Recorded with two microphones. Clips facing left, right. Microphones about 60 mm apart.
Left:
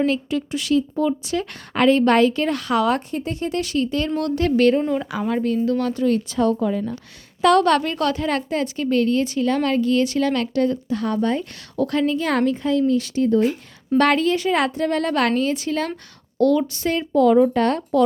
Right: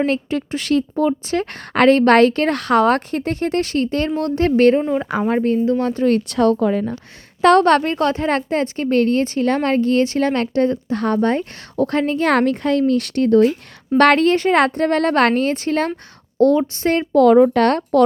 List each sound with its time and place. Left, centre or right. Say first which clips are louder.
0.0 s speech: right 2 dB; right
3.6 s speech: right 3 dB; right
4.2 s a woman's voice: right 3 dB; right
4.8 s speech: right 2 dB; centre
5.3 s a woman's voice: right 3 dB; right
6.1 s speech: right 4 dB; right
7.4 s a woman's voice: right 3 dB; right
10.9 s speech: right 4 dB; right
16.4 s speech: right 3 dB; right